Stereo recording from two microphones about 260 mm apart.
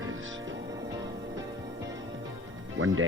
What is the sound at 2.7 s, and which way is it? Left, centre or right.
Speech, right.